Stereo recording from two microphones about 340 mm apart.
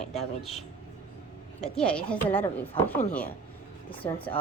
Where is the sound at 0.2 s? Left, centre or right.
Centre.